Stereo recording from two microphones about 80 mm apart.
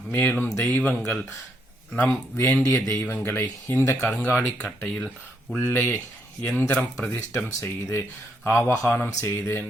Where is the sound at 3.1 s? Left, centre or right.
Left.